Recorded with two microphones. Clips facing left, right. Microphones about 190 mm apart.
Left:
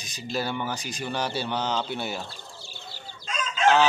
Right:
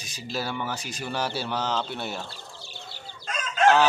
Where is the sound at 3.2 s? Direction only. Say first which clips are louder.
Right 2 dB; 55° right (ahead or behind).